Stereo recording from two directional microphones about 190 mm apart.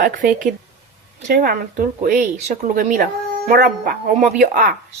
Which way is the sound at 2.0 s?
45° right (ahead or behind).